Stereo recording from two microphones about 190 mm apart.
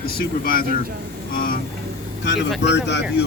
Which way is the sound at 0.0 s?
50° left (ahead or behind).